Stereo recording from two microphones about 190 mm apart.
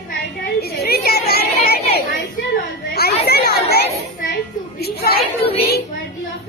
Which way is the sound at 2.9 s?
55° left (ahead or behind).